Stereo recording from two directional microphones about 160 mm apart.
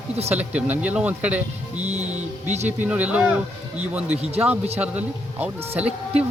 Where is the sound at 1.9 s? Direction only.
45° right (ahead or behind).